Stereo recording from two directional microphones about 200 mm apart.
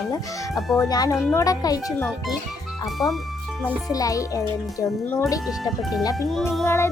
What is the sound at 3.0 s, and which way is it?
Speech, 20° left (ahead or behind).